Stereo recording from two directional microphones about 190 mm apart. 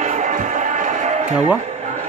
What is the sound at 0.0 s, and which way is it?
Music, 40° right (ahead or behind).